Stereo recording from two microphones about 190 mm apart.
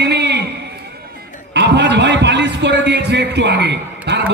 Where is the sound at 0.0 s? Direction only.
65° right (ahead or behind).